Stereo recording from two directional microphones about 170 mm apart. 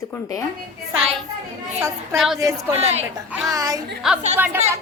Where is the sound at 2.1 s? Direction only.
Centre (ahead or behind).